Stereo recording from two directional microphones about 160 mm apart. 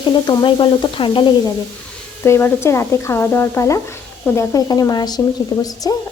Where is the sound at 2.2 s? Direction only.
15° left (ahead or behind).